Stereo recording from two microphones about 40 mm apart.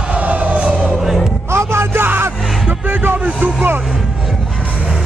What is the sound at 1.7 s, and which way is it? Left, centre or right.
Music, right.